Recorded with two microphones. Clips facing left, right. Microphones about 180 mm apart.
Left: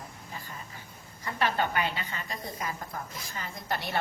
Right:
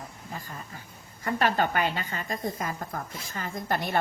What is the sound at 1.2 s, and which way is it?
Speech, 45° right (ahead or behind).